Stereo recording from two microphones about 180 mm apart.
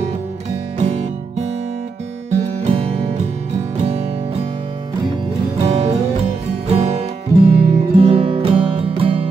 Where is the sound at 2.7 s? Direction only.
35° right (ahead or behind).